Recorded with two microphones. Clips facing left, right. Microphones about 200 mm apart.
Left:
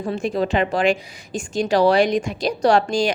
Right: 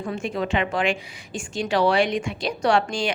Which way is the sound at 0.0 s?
35° left (ahead or behind).